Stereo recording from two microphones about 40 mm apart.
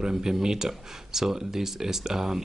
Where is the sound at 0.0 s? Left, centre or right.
Centre.